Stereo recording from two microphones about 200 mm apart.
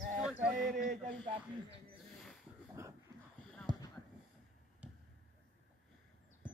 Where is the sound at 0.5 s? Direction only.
40° right (ahead or behind).